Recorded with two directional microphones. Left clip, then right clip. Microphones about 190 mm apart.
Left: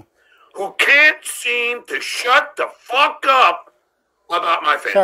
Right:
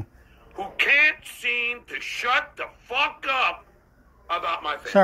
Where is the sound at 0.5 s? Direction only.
50° left (ahead or behind).